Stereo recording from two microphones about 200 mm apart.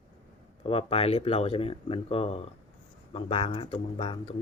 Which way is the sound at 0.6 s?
30° left (ahead or behind).